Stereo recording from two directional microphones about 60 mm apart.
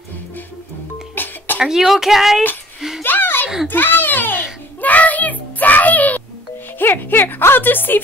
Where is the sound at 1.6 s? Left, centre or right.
Centre.